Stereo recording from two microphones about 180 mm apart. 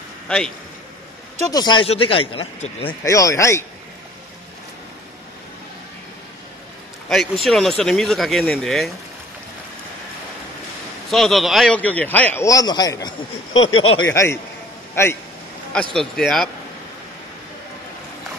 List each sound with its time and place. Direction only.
1.5 s speech: 25° left (ahead or behind)
3.0 s a man's voice: 15° left (ahead or behind)
7.1 s speech: centre (ahead or behind)
11.1 s a man's voice: centre (ahead or behind); by 13.6 s 20° left (ahead or behind)
13.6 s speech: 90° left
14.1 s a man's voice: 15° left (ahead or behind)
15.7 s speech: 5° left (ahead or behind)